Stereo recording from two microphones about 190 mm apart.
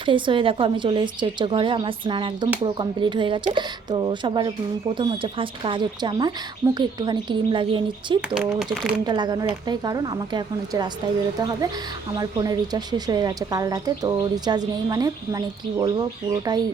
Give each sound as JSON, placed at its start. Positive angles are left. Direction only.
{"t": 0.0, "sound": "a woman's voice", "side_deg": -25}
{"t": 8.7, "sound": "speech", "side_deg": -5}
{"t": 9.0, "sound": "a woman's voice", "side_deg": -20}